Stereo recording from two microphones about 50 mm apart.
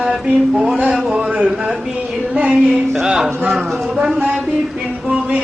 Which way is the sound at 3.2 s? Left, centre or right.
Right.